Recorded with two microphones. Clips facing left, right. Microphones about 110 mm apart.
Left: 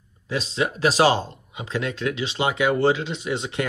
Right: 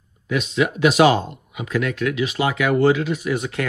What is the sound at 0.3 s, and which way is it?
Speech, 30° left (ahead or behind).